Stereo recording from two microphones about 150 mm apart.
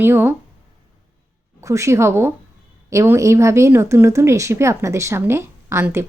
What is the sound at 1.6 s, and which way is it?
Speech, 20° right (ahead or behind).